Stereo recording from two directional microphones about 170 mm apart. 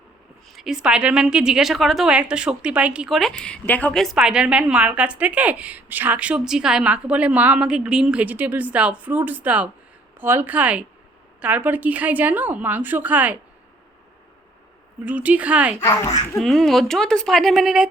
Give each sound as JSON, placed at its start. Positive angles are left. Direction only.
{"t": 0.5, "sound": "a woman's voice", "side_deg": 0}
{"t": 15.0, "sound": "a woman's voice", "side_deg": -10}
{"t": 15.8, "sound": "a child's voice", "side_deg": 15}
{"t": 16.4, "sound": "speech", "side_deg": 0}